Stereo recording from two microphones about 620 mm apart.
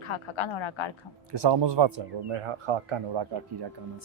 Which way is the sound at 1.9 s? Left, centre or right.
Right.